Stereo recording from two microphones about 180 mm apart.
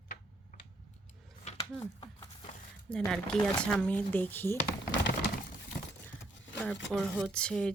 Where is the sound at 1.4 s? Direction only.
30° left (ahead or behind).